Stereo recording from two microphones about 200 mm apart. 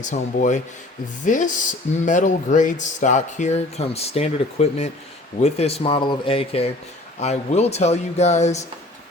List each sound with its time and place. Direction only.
0.0 s speech: 35° left (ahead or behind)